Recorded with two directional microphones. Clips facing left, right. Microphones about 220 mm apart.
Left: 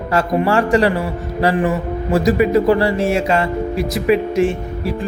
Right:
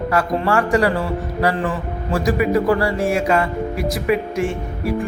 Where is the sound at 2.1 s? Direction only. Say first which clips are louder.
Left 4 dB; 25° left (ahead or behind).